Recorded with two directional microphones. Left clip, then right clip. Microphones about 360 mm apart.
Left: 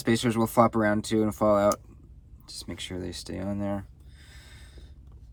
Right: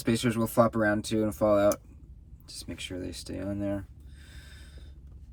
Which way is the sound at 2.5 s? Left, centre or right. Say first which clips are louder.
Left 1 dB; left.